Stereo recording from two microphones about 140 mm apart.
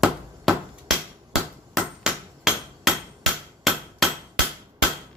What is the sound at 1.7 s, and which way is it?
Hammer, 5° right (ahead or behind).